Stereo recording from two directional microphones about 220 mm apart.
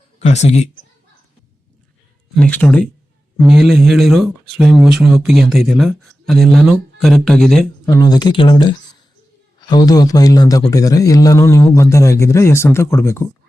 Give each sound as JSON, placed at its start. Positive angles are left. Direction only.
{"t": 0.2, "sound": "speech", "side_deg": 30}
{"t": 2.3, "sound": "speech", "side_deg": 5}
{"t": 7.9, "sound": "a man's voice", "side_deg": 15}